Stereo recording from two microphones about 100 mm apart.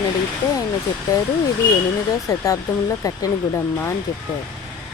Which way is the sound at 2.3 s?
35° left (ahead or behind).